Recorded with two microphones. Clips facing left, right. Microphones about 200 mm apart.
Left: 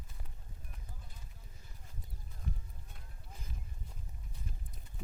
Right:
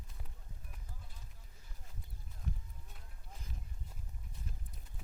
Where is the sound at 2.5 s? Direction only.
Centre (ahead or behind).